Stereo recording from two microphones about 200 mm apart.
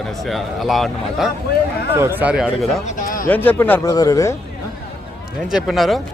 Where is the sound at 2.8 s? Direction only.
40° left (ahead or behind).